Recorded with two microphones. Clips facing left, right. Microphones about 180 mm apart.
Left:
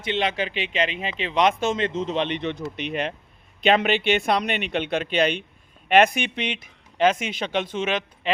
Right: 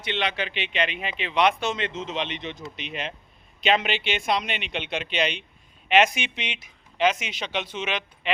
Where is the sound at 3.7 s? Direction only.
45° left (ahead or behind).